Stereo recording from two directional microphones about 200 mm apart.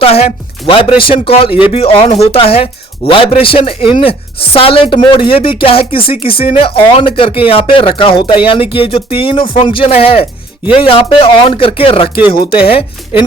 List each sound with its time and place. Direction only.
0.0 s a woman's voice: 30° left (ahead or behind)